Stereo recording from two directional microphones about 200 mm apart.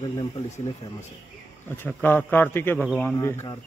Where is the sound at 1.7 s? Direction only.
10° left (ahead or behind).